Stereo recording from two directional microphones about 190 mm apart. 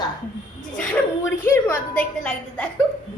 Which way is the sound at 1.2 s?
15° left (ahead or behind).